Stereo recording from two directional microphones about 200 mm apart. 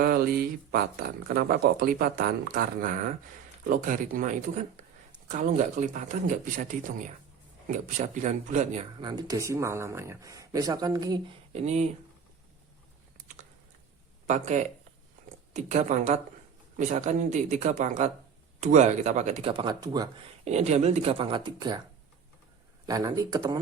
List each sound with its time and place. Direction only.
0.0 s speech: 50° right (ahead or behind)
9.0 s speech: 20° right (ahead or behind)
11.5 s speech: 35° right (ahead or behind)
14.3 s speech: 35° right (ahead or behind); by 20.1 s 20° right (ahead or behind)
20.4 s speech: 35° right (ahead or behind)
22.9 s speech: 20° right (ahead or behind)